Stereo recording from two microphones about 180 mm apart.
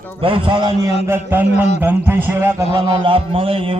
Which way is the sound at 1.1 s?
10° right (ahead or behind).